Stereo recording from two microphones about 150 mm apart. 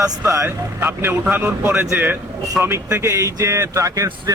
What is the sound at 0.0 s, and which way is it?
Speech, 20° right (ahead or behind).